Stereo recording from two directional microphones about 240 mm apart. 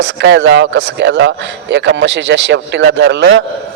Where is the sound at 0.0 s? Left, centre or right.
Right.